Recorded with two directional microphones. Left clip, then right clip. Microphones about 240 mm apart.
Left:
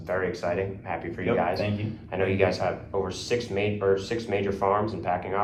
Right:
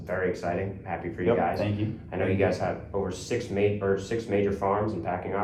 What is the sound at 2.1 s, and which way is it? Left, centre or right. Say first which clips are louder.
Speech: left 2 dB; centre.